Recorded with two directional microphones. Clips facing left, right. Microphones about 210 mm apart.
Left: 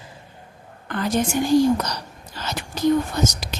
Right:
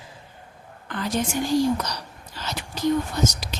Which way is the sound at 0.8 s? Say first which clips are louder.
Left 4 dB; 50° left (ahead or behind).